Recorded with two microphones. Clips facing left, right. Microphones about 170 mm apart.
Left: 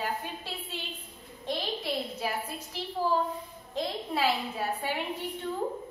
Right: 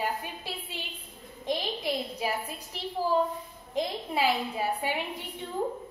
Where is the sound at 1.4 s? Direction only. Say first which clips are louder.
Right 2 dB; 15° right (ahead or behind).